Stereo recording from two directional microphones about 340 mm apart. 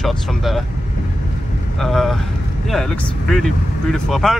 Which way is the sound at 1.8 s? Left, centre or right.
Centre.